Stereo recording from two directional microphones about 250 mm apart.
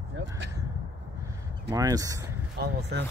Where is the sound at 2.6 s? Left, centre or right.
Right.